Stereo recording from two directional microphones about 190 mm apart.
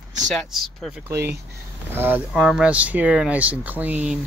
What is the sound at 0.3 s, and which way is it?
Speech, centre (ahead or behind).